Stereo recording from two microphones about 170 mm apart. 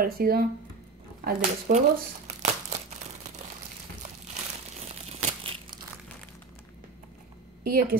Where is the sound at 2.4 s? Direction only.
40° right (ahead or behind).